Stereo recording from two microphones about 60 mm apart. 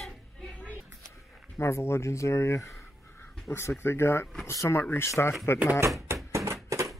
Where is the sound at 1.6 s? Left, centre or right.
Left.